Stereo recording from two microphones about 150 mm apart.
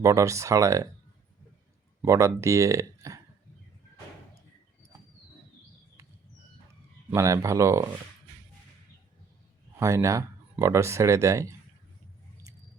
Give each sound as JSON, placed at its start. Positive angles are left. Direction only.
{"t": 0.0, "sound": "speech", "side_deg": -20}
{"t": 2.0, "sound": "speech", "side_deg": -20}
{"t": 7.1, "sound": "speech", "side_deg": -20}
{"t": 9.7, "sound": "speech", "side_deg": -20}